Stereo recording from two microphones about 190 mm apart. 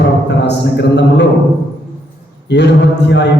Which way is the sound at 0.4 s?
65° left (ahead or behind).